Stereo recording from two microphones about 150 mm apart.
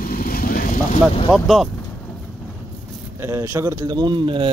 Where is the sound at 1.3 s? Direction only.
Centre (ahead or behind).